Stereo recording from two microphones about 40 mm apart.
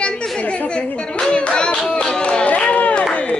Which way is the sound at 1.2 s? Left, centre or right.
Left.